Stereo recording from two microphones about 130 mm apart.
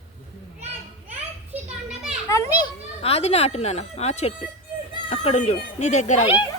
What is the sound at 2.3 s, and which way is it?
Children playing, 25° left (ahead or behind).